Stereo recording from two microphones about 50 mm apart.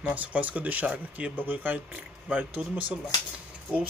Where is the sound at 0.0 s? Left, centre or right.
Right.